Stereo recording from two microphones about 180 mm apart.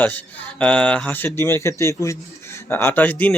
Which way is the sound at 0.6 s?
5° left (ahead or behind).